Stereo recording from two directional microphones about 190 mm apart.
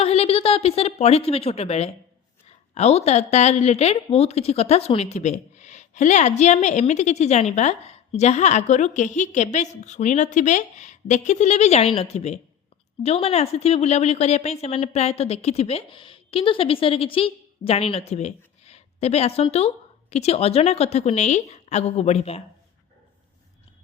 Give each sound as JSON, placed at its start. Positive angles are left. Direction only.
{"t": 0.0, "sound": "a woman's voice", "side_deg": 35}